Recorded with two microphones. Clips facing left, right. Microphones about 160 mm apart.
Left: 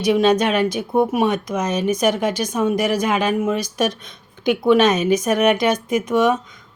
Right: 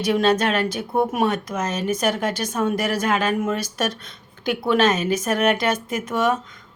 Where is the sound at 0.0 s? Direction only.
10° left (ahead or behind).